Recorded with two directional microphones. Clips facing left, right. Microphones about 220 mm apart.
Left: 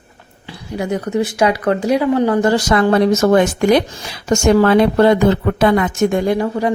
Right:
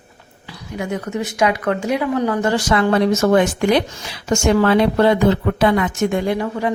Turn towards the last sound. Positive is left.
turn(degrees=35)  # may be behind; listen again after turning